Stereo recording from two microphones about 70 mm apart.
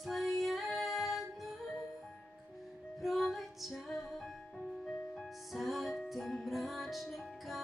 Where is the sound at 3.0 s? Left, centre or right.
Centre.